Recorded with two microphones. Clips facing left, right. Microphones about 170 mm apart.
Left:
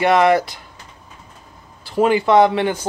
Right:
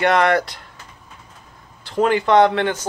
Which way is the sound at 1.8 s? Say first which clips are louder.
Left 2 dB; 5° left (ahead or behind).